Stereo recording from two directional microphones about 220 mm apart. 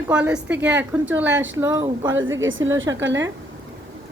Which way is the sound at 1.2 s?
55° right (ahead or behind).